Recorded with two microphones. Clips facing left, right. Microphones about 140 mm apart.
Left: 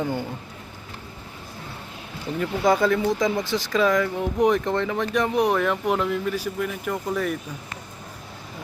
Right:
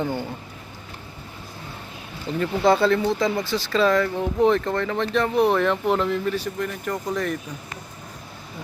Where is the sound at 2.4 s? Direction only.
10° left (ahead or behind).